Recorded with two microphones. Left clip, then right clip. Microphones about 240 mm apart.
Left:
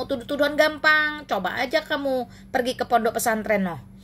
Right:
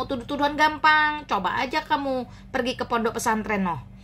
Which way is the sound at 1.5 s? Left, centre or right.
Right.